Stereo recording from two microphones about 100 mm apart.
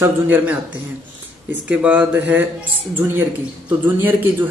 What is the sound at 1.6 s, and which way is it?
Speech, 15° right (ahead or behind).